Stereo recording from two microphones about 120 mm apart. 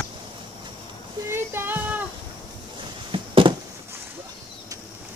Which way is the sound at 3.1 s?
45° right (ahead or behind).